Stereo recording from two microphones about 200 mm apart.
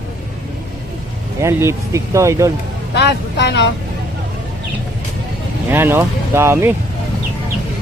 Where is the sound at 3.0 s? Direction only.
55° left (ahead or behind).